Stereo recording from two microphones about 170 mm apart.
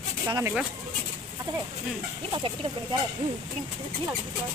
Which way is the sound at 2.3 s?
30° right (ahead or behind).